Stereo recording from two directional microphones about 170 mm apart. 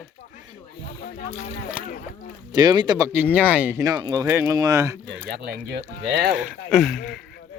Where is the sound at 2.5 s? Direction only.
25° right (ahead or behind).